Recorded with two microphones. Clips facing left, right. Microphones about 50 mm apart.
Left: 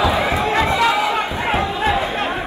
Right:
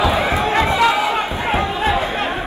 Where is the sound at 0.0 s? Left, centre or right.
Right.